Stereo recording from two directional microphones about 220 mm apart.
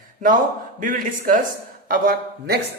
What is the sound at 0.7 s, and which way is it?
A man's voice, 35° right (ahead or behind).